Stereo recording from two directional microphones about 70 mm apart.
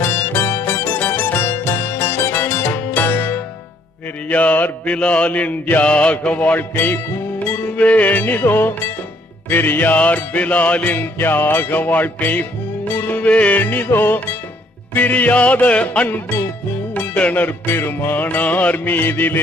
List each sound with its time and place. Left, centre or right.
0.0 s music: left
13.1 s music: centre